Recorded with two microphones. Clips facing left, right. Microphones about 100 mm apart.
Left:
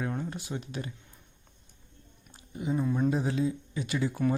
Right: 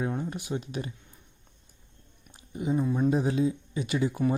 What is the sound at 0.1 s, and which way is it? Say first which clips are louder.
Speech: right 3 dB; 15° right (ahead or behind).